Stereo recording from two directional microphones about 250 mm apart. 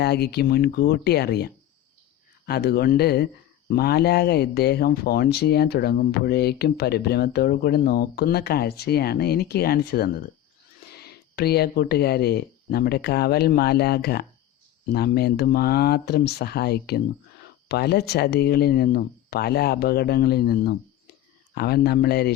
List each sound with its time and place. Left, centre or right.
0.0 s speech: left
2.5 s speech: left